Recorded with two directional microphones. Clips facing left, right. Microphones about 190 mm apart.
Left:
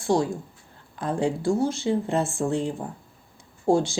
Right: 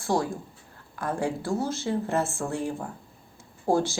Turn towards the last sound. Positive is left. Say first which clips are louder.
# left 3 dB
turn(degrees=15)  # may be behind; listen again after turning